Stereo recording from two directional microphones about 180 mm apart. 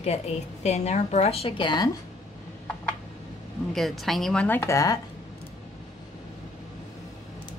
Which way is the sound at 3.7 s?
Centre (ahead or behind).